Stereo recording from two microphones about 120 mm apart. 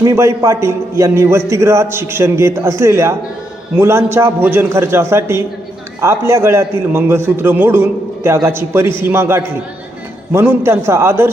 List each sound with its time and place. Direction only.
0.0 s a man's voice: 25° right (ahead or behind)